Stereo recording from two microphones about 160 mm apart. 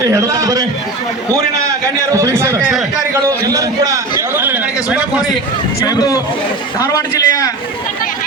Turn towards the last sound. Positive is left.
turn(degrees=20)  # may be behind; listen again after turning